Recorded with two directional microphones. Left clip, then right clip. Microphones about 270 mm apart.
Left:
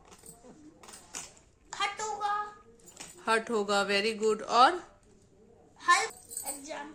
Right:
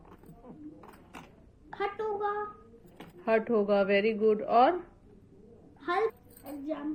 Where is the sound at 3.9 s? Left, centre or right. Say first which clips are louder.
Right 2 dB; left.